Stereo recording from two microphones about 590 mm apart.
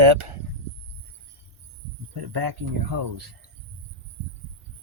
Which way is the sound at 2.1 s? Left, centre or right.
Right.